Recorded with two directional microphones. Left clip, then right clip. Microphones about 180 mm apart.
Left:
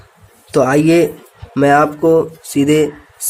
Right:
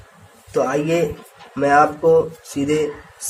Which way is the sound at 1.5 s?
55° left (ahead or behind).